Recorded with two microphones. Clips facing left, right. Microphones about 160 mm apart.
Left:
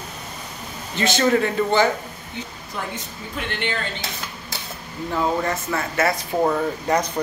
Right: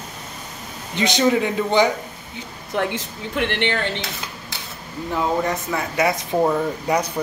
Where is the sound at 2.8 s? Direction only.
80° right.